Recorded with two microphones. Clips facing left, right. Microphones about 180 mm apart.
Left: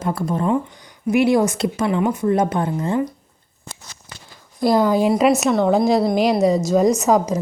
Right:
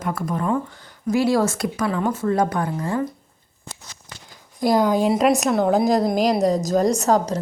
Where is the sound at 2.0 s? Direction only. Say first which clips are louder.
Left 2 dB; 15° left (ahead or behind).